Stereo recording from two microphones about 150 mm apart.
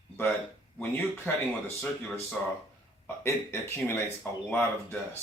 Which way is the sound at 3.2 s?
15° left (ahead or behind).